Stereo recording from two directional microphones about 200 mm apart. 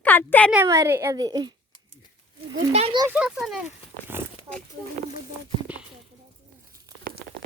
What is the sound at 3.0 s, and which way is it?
Speech, 5° right (ahead or behind).